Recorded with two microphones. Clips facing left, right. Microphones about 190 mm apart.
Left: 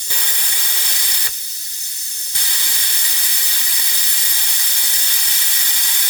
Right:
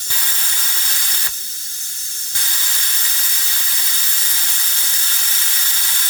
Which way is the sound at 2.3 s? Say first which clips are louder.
Left 1 dB; 15° left (ahead or behind).